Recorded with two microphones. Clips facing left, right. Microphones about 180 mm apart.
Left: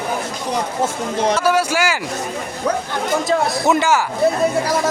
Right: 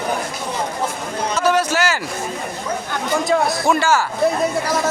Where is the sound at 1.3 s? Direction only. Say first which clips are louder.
Even; 10° left (ahead or behind).